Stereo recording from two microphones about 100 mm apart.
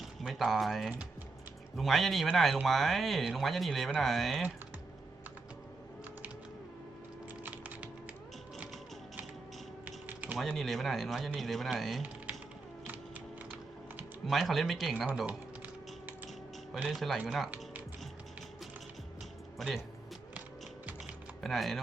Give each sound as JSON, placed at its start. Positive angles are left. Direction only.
{"t": 0.0, "sound": "speech", "side_deg": 0}
{"t": 7.4, "sound": "typing", "side_deg": -15}
{"t": 9.8, "sound": "mechanisms", "side_deg": -15}
{"t": 10.3, "sound": "speech", "side_deg": 0}
{"t": 12.0, "sound": "typing", "side_deg": -15}
{"t": 12.8, "sound": "a sound", "side_deg": -15}
{"t": 14.3, "sound": "speech", "side_deg": 0}
{"t": 15.3, "sound": "typing", "side_deg": -15}
{"t": 16.9, "sound": "speech", "side_deg": 0}
{"t": 19.5, "sound": "speech", "side_deg": 0}
{"t": 21.4, "sound": "speech", "side_deg": 0}